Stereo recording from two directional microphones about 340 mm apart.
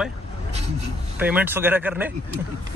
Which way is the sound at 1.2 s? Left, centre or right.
Centre.